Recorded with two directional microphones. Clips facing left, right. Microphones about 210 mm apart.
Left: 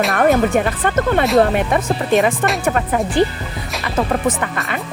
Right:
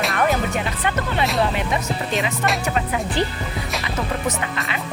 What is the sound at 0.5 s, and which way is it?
Speech, 50° left (ahead or behind).